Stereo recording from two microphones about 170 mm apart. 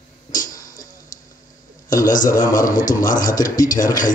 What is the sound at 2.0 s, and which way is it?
A man's voice, 50° left (ahead or behind).